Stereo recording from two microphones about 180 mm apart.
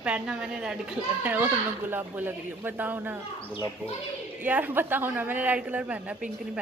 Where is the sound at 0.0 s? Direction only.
5° right (ahead or behind).